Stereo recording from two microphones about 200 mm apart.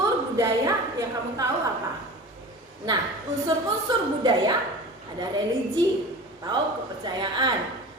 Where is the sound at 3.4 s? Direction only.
20° right (ahead or behind).